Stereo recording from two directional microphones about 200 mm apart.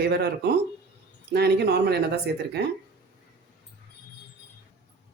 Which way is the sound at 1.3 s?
55° right (ahead or behind).